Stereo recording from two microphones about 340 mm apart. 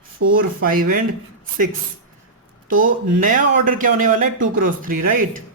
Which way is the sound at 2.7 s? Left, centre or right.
Right.